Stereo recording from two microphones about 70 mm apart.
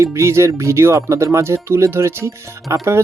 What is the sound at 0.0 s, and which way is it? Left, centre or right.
Speech, right.